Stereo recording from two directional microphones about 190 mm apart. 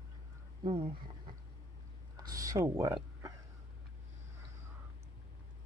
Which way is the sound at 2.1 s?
20° right (ahead or behind).